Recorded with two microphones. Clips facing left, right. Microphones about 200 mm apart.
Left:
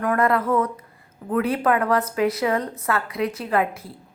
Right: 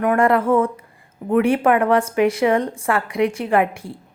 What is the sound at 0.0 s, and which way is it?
A woman's voice, 25° right (ahead or behind).